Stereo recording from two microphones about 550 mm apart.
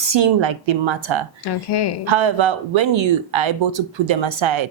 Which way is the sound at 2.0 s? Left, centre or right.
Right.